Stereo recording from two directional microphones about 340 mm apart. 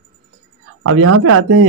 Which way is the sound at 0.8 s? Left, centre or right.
Right.